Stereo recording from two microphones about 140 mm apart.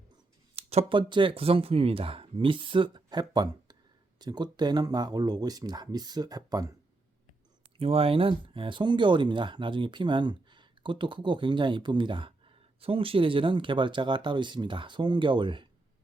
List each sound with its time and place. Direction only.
0.5 s speech: 45° right (ahead or behind); by 6.7 s 25° right (ahead or behind)
7.8 s speech: 45° right (ahead or behind)